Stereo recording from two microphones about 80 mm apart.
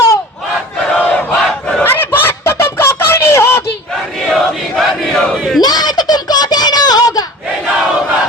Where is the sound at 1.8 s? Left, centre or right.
Left.